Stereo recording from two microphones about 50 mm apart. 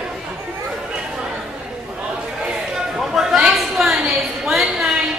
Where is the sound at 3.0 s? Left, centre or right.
Centre.